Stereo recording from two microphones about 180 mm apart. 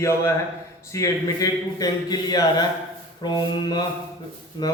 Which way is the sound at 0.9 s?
20° left (ahead or behind).